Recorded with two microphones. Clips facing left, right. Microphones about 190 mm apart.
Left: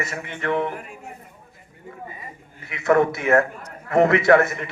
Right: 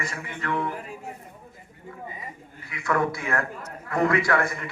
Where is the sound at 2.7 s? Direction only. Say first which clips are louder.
Left 7 dB; 25° left (ahead or behind).